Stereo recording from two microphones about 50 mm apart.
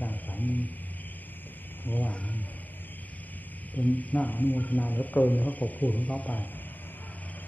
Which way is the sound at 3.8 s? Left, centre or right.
Left.